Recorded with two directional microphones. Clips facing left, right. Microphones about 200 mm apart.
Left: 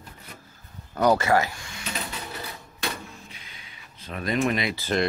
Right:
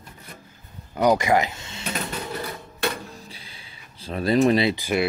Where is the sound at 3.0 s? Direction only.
35° right (ahead or behind).